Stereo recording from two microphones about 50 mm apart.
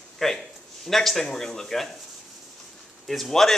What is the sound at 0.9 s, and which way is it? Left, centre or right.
Speech, centre.